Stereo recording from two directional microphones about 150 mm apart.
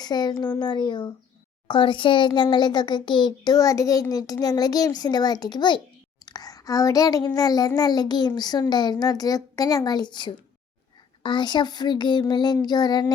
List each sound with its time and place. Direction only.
0.0 s a woman's voice: 30° left (ahead or behind)
6.2 s a sound: 25° left (ahead or behind)
8.4 s a child's voice: 25° left (ahead or behind)